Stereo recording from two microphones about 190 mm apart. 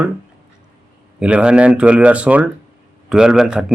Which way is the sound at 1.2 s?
5° right (ahead or behind).